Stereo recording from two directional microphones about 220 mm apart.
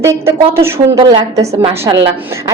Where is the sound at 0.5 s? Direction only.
15° right (ahead or behind).